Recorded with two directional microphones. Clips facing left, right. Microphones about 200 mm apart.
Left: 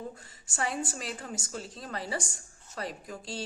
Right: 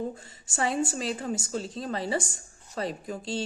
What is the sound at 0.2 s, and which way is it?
Speech, 25° right (ahead or behind).